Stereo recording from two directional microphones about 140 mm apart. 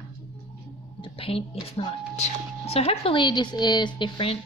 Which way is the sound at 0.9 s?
40° left (ahead or behind).